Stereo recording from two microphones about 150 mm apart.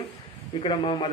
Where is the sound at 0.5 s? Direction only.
35° left (ahead or behind).